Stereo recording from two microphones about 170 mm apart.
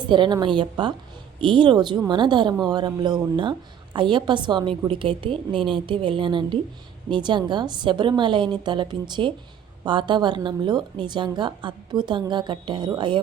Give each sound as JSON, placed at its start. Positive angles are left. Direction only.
{"t": 0.1, "sound": "a woman's voice", "side_deg": -25}